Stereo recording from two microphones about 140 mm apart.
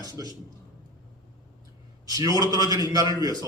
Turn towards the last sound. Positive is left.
turn(degrees=-25)  # may be behind; listen again after turning